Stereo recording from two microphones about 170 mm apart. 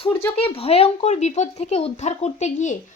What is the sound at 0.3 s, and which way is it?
A woman's voice, 35° left (ahead or behind).